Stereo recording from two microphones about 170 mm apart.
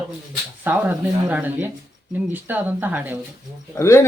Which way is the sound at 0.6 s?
10° right (ahead or behind).